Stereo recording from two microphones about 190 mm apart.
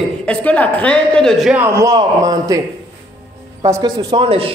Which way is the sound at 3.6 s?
20° right (ahead or behind).